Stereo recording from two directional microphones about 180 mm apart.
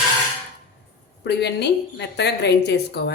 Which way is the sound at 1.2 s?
70° left (ahead or behind).